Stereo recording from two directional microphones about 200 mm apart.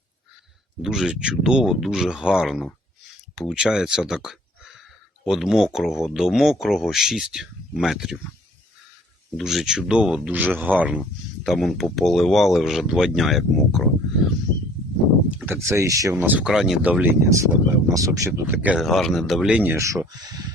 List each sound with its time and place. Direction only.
0.8 s speech: 5° right (ahead or behind)
9.4 s speech: centre (ahead or behind)
15.3 s speech: 5° right (ahead or behind)